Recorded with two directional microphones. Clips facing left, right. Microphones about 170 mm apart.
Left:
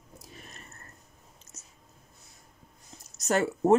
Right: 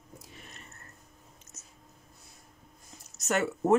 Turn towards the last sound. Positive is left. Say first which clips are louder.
# left 3 dB
turn(degrees=35)  # may be behind; listen again after turning